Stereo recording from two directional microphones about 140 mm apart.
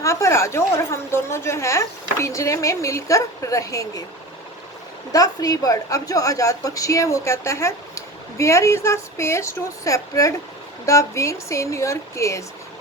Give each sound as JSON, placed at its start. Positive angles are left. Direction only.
{"t": 0.0, "sound": "a woman's voice", "side_deg": 20}
{"t": 5.1, "sound": "a woman's voice", "side_deg": 25}